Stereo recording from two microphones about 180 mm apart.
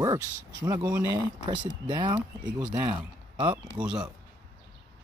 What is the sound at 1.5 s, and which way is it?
Speech, 25° right (ahead or behind).